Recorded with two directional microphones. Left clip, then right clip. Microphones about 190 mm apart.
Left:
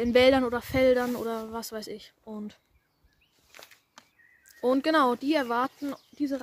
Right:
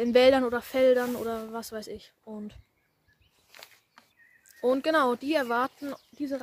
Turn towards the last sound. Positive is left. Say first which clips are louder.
# left 2 dB
turn(degrees=-5)  # may be behind; listen again after turning